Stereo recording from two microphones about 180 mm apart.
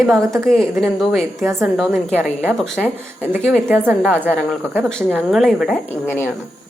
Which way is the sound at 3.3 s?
10° right (ahead or behind).